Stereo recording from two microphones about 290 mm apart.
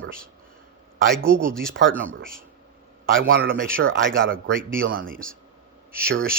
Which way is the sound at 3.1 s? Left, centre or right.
Right.